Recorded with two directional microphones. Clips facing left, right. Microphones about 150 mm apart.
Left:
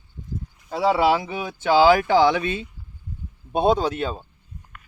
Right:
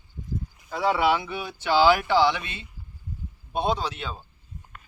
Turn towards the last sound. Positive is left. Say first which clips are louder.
# left 7 dB
turn(degrees=45)  # may be behind; listen again after turning